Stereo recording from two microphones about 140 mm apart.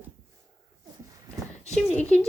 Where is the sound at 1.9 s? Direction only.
10° left (ahead or behind).